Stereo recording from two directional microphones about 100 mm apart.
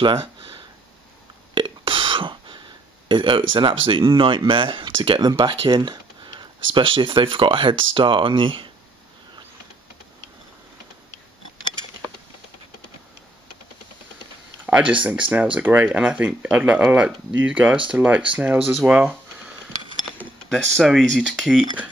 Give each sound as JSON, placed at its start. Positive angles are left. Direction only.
{"t": 1.5, "sound": "a sound", "side_deg": -55}
{"t": 3.1, "sound": "speech", "side_deg": -55}
{"t": 14.7, "sound": "speech", "side_deg": -10}
{"t": 20.4, "sound": "speech", "side_deg": 5}